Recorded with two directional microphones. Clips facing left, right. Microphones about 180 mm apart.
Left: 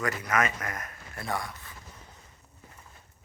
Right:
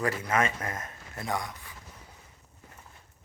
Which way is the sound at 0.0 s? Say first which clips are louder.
Right 1 dB; 30° right (ahead or behind).